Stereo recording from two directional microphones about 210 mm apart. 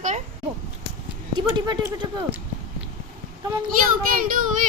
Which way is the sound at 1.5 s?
20° right (ahead or behind).